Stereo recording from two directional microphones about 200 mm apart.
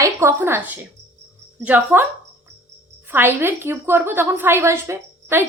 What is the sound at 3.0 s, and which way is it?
A woman's voice, 10° right (ahead or behind).